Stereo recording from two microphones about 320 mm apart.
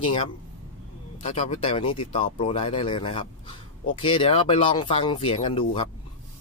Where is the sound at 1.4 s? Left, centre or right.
Centre.